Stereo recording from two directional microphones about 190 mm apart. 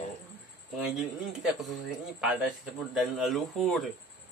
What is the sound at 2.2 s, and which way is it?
A man's voice, 5° right (ahead or behind).